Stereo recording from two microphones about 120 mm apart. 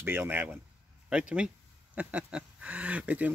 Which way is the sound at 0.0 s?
20° right (ahead or behind).